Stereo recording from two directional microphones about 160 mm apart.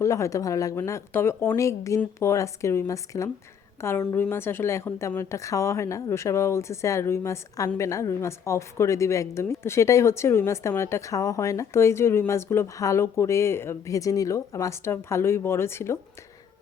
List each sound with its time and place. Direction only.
0.0 s a woman's voice: 20° left (ahead or behind)